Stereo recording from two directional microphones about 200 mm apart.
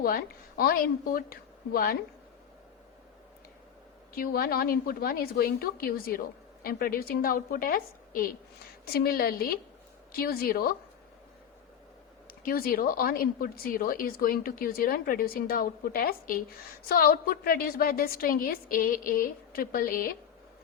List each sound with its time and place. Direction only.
0.0 s a woman's voice: 50° left (ahead or behind)
4.1 s a woman's voice: 45° left (ahead or behind)
12.3 s a woman's voice: 45° left (ahead or behind)